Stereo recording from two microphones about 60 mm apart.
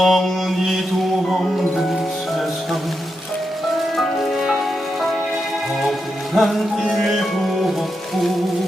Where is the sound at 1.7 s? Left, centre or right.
Centre.